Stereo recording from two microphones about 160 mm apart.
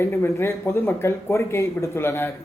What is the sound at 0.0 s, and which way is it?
Speech, 15° left (ahead or behind).